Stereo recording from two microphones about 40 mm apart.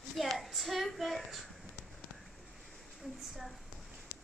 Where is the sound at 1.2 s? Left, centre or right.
Centre.